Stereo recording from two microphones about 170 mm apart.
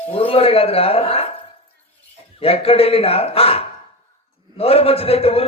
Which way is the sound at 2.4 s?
35° left (ahead or behind).